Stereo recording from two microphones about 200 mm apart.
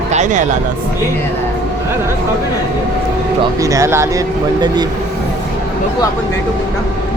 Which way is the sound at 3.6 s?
15° right (ahead or behind).